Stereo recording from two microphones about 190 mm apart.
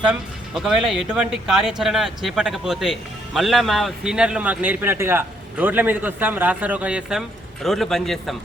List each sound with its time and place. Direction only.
0.0 s speech: 5° right (ahead or behind)